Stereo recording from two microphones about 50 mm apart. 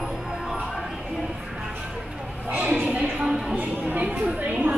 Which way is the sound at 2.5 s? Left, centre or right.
Right.